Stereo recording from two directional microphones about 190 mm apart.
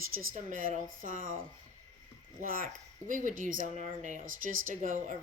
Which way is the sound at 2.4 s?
45° right (ahead or behind).